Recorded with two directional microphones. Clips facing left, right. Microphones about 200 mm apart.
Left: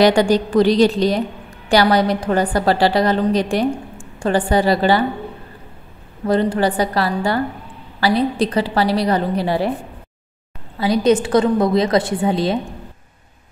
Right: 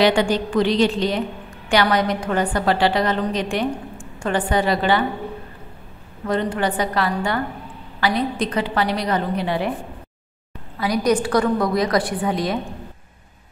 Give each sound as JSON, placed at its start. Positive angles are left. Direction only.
{"t": 0.0, "sound": "a woman's voice", "side_deg": 40}
{"t": 6.2, "sound": "a woman's voice", "side_deg": 35}
{"t": 10.8, "sound": "a woman's voice", "side_deg": 25}